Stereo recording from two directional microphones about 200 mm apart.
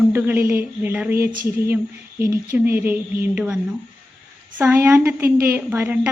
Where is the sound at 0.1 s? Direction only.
10° right (ahead or behind).